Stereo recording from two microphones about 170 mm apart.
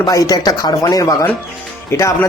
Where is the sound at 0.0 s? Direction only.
20° left (ahead or behind).